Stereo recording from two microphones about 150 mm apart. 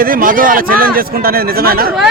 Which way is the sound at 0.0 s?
70° right (ahead or behind).